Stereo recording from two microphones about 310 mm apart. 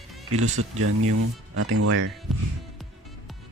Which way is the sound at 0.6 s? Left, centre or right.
Right.